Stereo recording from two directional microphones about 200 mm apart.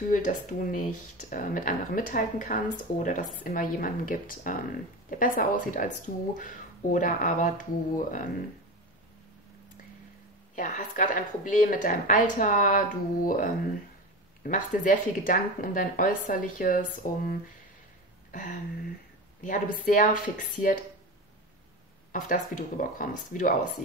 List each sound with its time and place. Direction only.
0.1 s speech: 40° left (ahead or behind)
10.5 s speech: 40° left (ahead or behind)
18.3 s a sound: 40° left (ahead or behind)
19.4 s speech: 40° left (ahead or behind)
22.1 s speech: 40° left (ahead or behind)